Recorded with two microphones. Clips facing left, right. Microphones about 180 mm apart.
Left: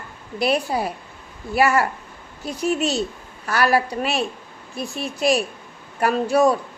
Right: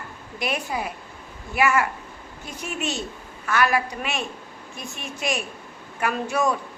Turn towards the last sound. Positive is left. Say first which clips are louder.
# left 6 dB
turn(degrees=35)  # may be behind; listen again after turning